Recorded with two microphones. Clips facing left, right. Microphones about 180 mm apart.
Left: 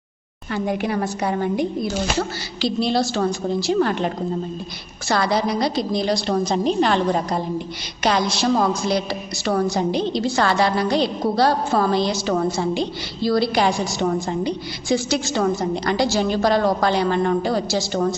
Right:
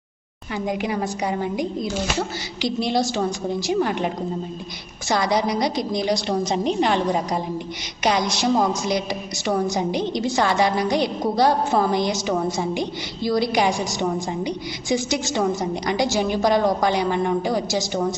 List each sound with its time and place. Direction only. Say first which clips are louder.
0.5 s a woman's voice: left 2 dB; 15° right (ahead or behind)